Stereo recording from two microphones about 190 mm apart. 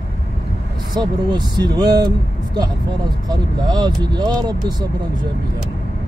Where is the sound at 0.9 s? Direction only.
20° right (ahead or behind).